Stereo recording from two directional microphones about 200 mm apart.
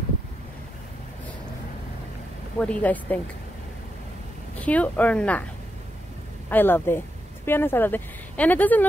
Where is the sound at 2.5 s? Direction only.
5° left (ahead or behind).